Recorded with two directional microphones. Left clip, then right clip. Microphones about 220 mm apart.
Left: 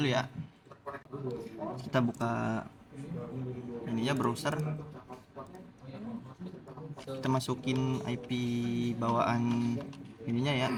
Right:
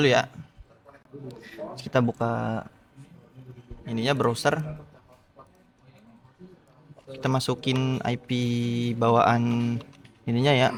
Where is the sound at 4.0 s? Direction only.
45° right (ahead or behind).